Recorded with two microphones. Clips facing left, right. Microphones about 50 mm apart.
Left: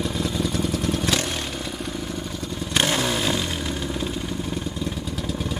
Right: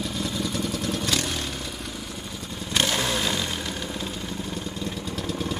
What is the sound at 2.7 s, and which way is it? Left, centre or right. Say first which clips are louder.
Motorcycle: left 2 dB; left.